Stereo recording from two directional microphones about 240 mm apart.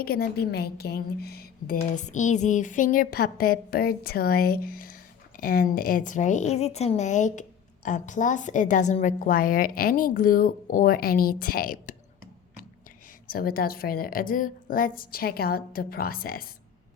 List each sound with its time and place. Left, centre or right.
0.0 s a woman's voice: left
13.2 s a woman's voice: left